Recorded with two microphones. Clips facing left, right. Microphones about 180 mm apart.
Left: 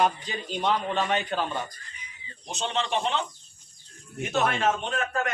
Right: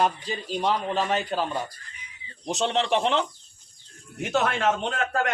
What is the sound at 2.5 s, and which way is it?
A man's voice, 75° right (ahead or behind).